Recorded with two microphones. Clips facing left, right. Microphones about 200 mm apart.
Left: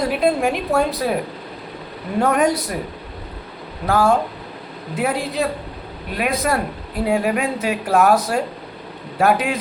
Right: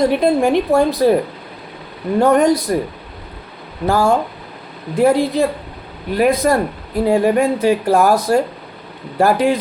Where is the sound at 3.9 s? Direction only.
Centre (ahead or behind).